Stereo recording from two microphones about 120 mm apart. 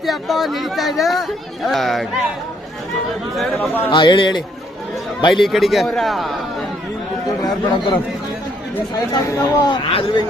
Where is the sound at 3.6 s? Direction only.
15° left (ahead or behind).